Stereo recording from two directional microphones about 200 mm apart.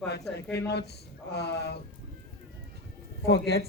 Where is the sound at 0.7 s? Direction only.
55° left (ahead or behind).